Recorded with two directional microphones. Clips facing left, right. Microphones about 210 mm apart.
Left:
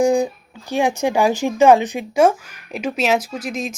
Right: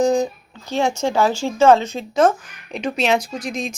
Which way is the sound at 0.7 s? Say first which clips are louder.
Left 1 dB; 15° left (ahead or behind).